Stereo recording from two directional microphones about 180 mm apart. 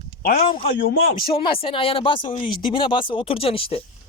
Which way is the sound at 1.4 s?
30° left (ahead or behind).